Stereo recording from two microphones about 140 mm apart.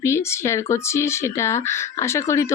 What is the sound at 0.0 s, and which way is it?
Speech, 20° left (ahead or behind).